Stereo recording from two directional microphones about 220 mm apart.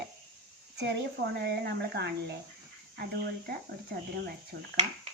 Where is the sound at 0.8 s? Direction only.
50° right (ahead or behind).